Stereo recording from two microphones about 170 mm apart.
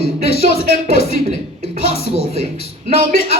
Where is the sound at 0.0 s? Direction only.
70° left (ahead or behind).